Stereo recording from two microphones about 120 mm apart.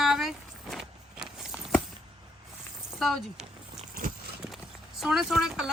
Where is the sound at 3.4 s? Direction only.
75° right (ahead or behind).